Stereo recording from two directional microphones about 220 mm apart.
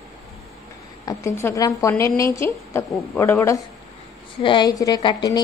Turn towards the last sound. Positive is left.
turn(degrees=20)  # may be behind; listen again after turning